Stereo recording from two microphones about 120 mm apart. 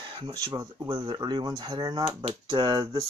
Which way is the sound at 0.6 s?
35° right (ahead or behind).